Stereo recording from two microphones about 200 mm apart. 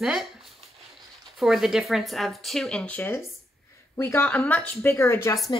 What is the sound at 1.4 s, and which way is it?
A woman's voice, centre (ahead or behind).